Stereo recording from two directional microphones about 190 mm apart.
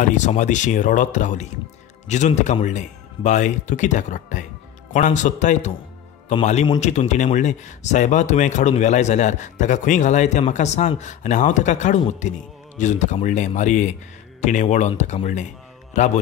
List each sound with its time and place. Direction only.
0.0 s speech: 40° left (ahead or behind)